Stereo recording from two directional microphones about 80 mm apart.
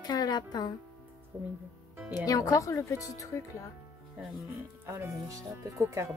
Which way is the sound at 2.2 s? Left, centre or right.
Left.